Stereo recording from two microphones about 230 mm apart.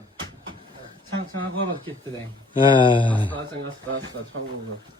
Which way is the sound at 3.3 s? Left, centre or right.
Right.